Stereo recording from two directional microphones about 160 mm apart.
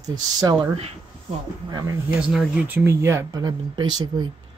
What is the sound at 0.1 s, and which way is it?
Speech, 25° right (ahead or behind).